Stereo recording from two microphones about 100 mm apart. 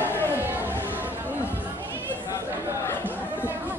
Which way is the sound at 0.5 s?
20° right (ahead or behind).